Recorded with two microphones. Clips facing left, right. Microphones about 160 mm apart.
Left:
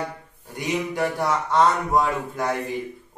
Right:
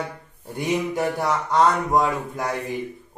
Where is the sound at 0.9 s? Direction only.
20° right (ahead or behind).